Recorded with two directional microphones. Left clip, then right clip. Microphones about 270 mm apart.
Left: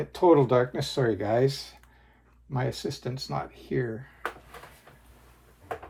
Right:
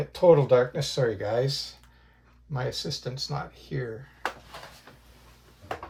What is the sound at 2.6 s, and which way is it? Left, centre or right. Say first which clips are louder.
Speech: even; left.